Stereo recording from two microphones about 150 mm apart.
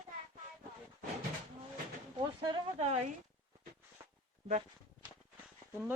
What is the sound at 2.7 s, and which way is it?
Speech, 45° right (ahead or behind).